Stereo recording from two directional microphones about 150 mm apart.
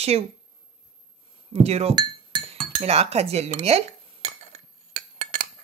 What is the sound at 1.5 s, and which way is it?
Speech, 45° right (ahead or behind).